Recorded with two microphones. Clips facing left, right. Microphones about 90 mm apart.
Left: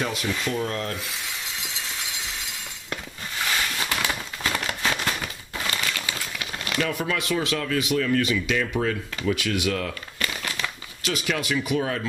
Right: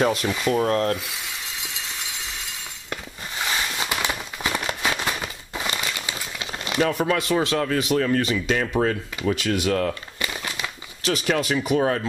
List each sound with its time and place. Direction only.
0.0 s speech: 40° right (ahead or behind)
2.9 s a sound: 20° right (ahead or behind); by 9.9 s 40° right (ahead or behind)
10.1 s crumpling: 20° right (ahead or behind)
11.0 s speech: 40° right (ahead or behind)